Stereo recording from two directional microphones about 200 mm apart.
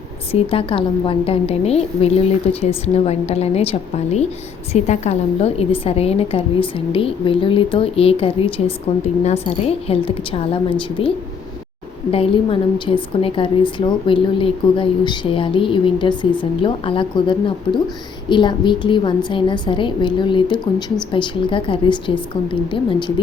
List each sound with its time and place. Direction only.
0.3 s a woman's voice: 30° left (ahead or behind)
12.1 s a woman's voice: 25° left (ahead or behind)